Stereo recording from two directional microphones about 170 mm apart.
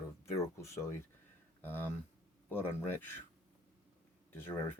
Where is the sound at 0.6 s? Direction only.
15° left (ahead or behind).